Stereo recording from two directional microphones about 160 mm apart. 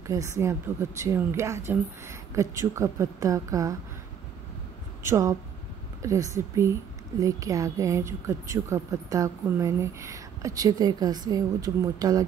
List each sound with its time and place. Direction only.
0.0 s a woman's voice: 20° right (ahead or behind)
5.0 s a woman's voice: 20° right (ahead or behind)